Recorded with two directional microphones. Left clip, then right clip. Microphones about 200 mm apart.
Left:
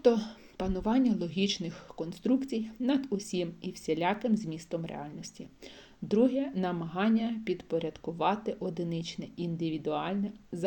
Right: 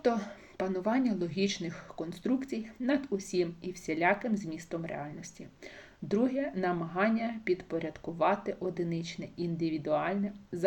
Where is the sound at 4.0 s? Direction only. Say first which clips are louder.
Right 4 dB; 30° left (ahead or behind).